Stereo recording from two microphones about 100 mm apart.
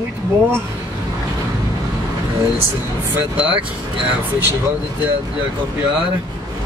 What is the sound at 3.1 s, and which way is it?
Speech, 15° right (ahead or behind).